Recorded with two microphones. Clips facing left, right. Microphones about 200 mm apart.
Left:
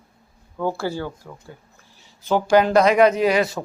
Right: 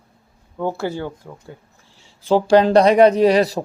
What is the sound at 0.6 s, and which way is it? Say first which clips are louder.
A man's voice: right 1 dB; 20° right (ahead or behind).